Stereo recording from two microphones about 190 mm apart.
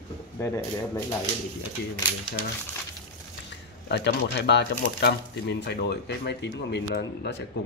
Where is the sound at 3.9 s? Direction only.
65° left (ahead or behind).